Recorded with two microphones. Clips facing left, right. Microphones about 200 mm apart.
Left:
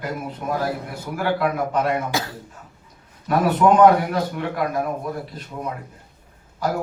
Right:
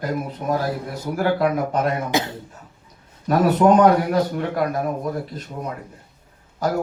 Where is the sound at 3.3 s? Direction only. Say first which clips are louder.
Right 2 dB; 40° right (ahead or behind).